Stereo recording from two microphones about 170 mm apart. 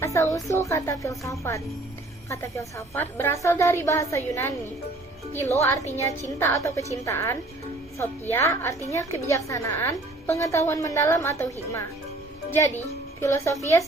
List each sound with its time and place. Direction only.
0.0 s a woman's voice: 15° left (ahead or behind)
12.5 s a woman's voice: 10° left (ahead or behind)